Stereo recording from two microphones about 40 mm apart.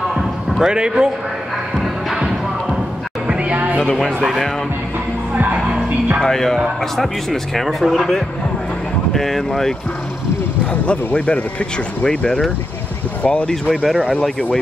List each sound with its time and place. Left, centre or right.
0.1 s basketball bounce: centre
0.6 s speech: centre
2.1 s music: centre
3.3 s music: right
5.3 s speech: right
6.2 s speech: centre
11.1 s speech: left
13.7 s speech: centre